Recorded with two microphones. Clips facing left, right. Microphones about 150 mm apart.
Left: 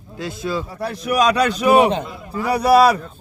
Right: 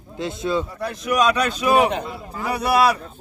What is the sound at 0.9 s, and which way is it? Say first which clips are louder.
A man's voice: left 3 dB; 35° left (ahead or behind).